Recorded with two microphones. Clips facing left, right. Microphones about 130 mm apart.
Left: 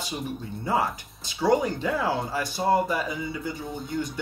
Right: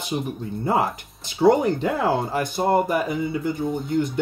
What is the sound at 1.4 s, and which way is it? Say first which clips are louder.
Speech: right 5 dB; 55° right (ahead or behind).